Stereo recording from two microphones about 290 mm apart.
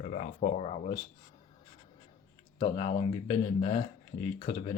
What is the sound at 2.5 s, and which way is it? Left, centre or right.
Speech, centre.